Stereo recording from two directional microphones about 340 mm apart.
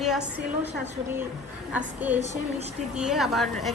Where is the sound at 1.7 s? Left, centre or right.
Centre.